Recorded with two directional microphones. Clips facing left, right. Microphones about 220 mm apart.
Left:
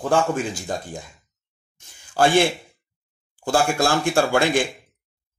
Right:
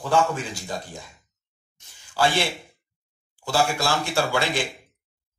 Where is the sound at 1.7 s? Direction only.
50° left (ahead or behind).